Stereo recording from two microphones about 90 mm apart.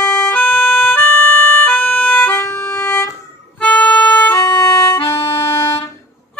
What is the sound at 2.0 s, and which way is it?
Music, 20° left (ahead or behind).